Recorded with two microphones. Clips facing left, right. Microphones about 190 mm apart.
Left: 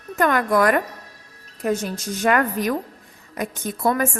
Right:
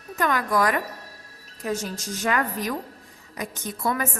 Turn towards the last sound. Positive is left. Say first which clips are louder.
# left 6 dB
turn(degrees=50)  # may be behind; listen again after turning